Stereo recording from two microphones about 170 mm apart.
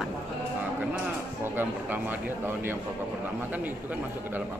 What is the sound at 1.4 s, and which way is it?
Speech, 10° right (ahead or behind).